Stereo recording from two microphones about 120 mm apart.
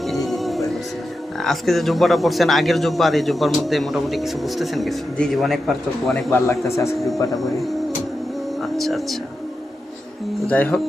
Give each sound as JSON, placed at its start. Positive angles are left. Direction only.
{"t": 0.0, "sound": "music", "side_deg": 0}
{"t": 1.4, "sound": "a man's voice", "side_deg": 0}
{"t": 6.7, "sound": "speech", "side_deg": 25}
{"t": 8.6, "sound": "speech", "side_deg": 0}
{"t": 10.4, "sound": "speech", "side_deg": 10}